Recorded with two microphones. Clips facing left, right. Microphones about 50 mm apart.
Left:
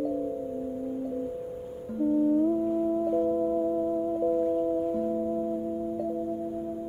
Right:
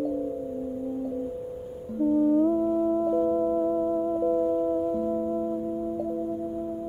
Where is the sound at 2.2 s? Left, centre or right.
Centre.